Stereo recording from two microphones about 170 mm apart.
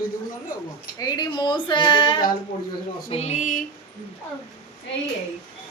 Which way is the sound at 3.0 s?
35° left (ahead or behind).